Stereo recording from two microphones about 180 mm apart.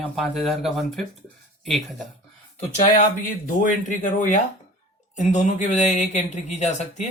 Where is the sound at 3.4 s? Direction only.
45° left (ahead or behind).